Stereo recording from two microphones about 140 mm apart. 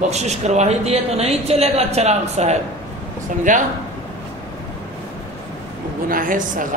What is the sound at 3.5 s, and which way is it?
Speech, 65° right (ahead or behind).